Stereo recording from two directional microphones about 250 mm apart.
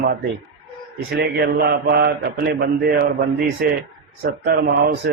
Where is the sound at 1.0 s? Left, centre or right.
Right.